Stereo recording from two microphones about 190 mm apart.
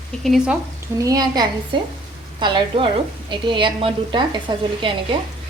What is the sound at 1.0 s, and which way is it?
Speech, 20° right (ahead or behind).